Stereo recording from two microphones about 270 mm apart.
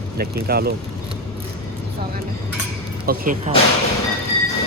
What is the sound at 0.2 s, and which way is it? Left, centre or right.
Speech, right.